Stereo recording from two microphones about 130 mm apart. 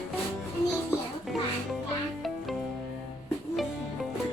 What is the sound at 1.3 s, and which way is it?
Music, centre (ahead or behind).